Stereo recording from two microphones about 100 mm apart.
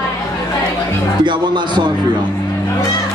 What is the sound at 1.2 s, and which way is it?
Speech, 50° right (ahead or behind).